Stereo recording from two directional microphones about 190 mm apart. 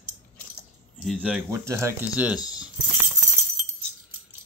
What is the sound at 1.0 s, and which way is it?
Speech, centre (ahead or behind).